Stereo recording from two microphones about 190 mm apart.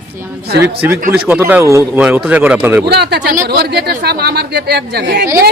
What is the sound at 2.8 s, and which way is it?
Speech, 60° right (ahead or behind).